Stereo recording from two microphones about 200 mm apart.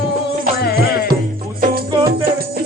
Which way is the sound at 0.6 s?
50° left (ahead or behind).